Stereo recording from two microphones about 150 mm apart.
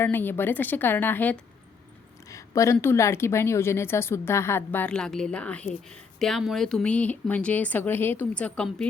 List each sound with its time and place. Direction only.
0.0 s speech: 15° left (ahead or behind)
2.3 s a sound: 20° left (ahead or behind)
2.7 s speech: 15° left (ahead or behind)